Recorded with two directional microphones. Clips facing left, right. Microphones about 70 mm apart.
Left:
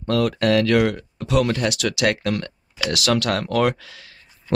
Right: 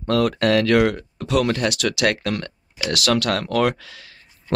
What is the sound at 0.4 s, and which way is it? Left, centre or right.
Speech, centre.